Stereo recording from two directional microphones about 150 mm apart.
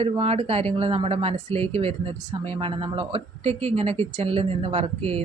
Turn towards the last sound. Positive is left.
turn(degrees=-40)  # may be behind; listen again after turning